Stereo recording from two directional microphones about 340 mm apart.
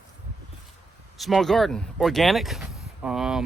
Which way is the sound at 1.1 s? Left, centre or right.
Centre.